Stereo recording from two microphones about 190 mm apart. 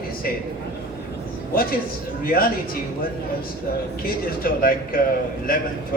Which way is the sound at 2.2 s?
50° left (ahead or behind).